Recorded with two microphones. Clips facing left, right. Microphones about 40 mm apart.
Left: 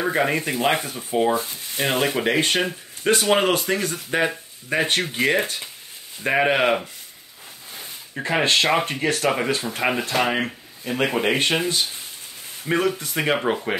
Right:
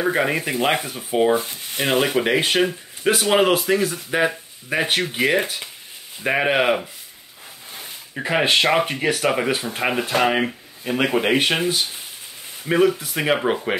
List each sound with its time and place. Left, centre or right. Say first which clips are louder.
0.0 s speech: right 1 dB; centre
1.3 s sizzle: right 3 dB; right
1.8 s a man's voice: right 2 dB; centre